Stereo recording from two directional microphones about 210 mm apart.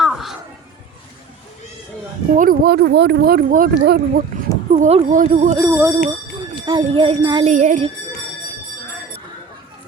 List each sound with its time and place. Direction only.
0.0 s a sound: centre (ahead or behind)
2.3 s speech: 40° right (ahead or behind)
4.7 s speech: 30° right (ahead or behind)
5.5 s speech: 5° right (ahead or behind)
6.7 s jingle bell: 25° right (ahead or behind)
7.5 s speech: 35° right (ahead or behind)